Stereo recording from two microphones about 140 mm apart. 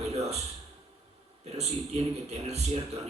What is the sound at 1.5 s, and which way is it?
Speech, 50° right (ahead or behind).